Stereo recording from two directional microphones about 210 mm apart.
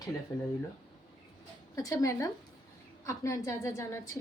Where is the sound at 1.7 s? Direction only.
15° left (ahead or behind).